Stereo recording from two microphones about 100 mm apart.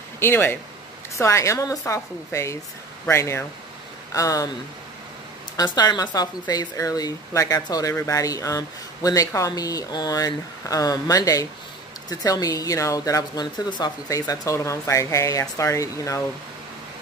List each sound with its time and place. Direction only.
0.2 s speech: 25° left (ahead or behind)
5.6 s speech: 40° left (ahead or behind)
13.7 s speech: 45° left (ahead or behind)
14.1 s speech: 35° left (ahead or behind)